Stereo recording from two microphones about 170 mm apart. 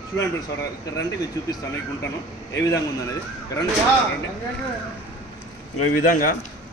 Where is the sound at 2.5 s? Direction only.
20° left (ahead or behind).